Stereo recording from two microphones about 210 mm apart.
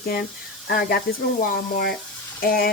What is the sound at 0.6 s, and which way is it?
Speech, 45° left (ahead or behind).